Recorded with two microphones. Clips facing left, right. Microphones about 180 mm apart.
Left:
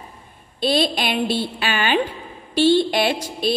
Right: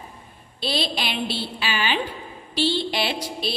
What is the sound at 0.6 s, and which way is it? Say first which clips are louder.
A woman's voice: left 7 dB; 50° left (ahead or behind).